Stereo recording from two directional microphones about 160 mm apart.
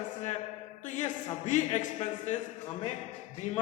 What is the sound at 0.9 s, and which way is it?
A man's voice, 50° left (ahead or behind).